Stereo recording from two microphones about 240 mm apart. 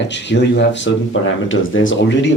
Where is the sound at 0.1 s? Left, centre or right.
Left.